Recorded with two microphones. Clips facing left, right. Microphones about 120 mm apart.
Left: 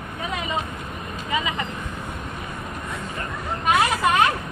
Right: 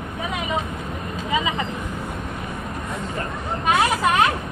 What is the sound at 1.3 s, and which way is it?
Vehicle, 20° right (ahead or behind).